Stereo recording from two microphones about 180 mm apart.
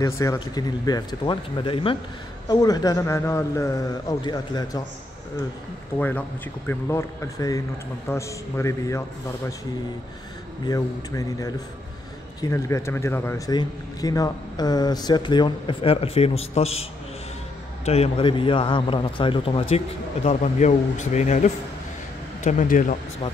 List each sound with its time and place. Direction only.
0.0 s a man's voice: 20° left (ahead or behind)
5.9 s a man's voice: 10° left (ahead or behind)
10.7 s a man's voice: 20° left (ahead or behind); by 16.8 s 35° left (ahead or behind)
17.8 s a man's voice: 35° left (ahead or behind)
20.2 s speech: 40° left (ahead or behind)